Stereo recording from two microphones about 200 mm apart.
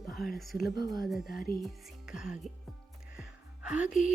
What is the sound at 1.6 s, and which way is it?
Speech, 5° right (ahead or behind).